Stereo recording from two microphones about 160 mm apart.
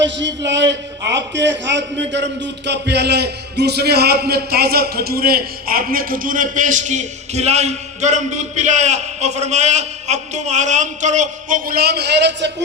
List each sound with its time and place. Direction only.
0.3 s a man's voice: 90° right